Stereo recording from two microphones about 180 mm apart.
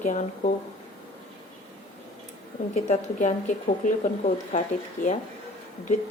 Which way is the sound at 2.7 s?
40° left (ahead or behind).